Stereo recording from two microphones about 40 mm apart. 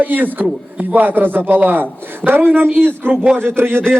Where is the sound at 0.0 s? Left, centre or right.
Right.